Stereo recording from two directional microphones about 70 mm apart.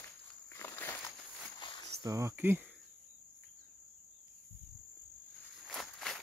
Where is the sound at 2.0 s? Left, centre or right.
Right.